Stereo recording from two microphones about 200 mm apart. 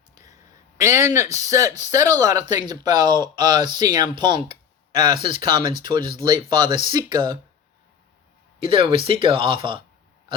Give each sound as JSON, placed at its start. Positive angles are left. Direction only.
{"t": 0.8, "sound": "speech", "side_deg": -15}
{"t": 8.5, "sound": "speech", "side_deg": -25}